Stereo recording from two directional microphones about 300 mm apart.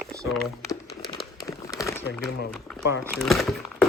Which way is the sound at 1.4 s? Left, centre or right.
Centre.